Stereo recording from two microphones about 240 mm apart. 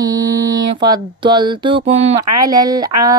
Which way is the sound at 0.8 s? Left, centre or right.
Centre.